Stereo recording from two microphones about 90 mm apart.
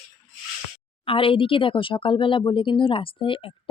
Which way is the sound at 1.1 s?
80° left.